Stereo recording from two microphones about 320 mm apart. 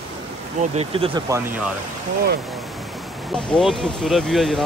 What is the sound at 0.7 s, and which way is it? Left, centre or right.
Speech, centre.